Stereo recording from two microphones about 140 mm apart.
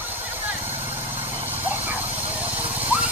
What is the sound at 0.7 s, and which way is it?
Vehicle, 40° right (ahead or behind).